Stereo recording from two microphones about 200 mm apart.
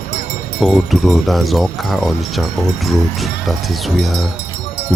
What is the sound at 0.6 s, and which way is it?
Speech, centre (ahead or behind).